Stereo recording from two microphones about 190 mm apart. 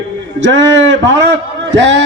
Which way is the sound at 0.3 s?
70° right (ahead or behind).